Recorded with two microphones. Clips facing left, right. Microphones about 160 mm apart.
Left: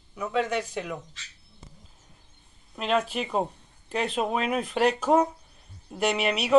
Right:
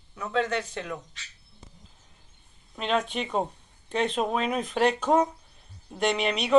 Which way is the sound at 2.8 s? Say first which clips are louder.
Left 1 dB; 5° left (ahead or behind).